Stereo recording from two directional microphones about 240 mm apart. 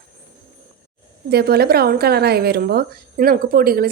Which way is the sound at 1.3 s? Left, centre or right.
Right.